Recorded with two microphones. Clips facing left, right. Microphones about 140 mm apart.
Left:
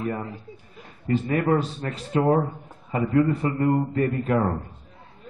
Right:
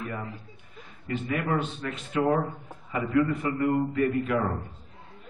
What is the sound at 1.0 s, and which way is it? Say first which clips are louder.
A man's voice: left 7 dB; 35° left (ahead or behind).